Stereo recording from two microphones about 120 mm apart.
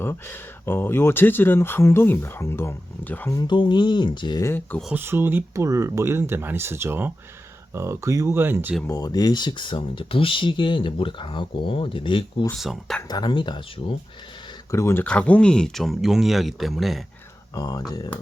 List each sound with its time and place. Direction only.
0.0 s speech: 20° left (ahead or behind)
3.3 s speech: 40° left (ahead or behind)
4.4 s speech: 15° left (ahead or behind)
4.9 s speech: 20° right (ahead or behind)
8.9 s speech: 30° left (ahead or behind)
12.5 s speech: centre (ahead or behind)
13.1 s speech: 35° left (ahead or behind)
14.7 s speech: 25° left (ahead or behind)
15.0 s speech: 10° left (ahead or behind)
17.5 s speech: 30° left (ahead or behind)